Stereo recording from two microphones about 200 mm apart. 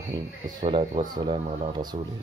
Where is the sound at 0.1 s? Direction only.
20° right (ahead or behind).